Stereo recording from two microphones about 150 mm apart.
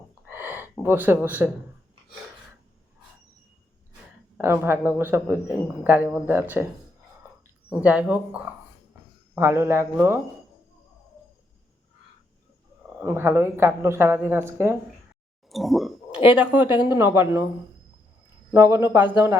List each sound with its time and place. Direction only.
0.3 s gasp: 15° right (ahead or behind)
4.4 s speech: 15° right (ahead or behind)
7.7 s speech: 10° right (ahead or behind)
13.0 s speech: 15° right (ahead or behind)
15.4 s speech: centre (ahead or behind); by 17.4 s 20° right (ahead or behind)
18.5 s a man's voice: 20° right (ahead or behind)